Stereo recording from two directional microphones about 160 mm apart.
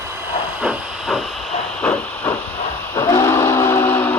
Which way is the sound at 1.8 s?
10° left (ahead or behind).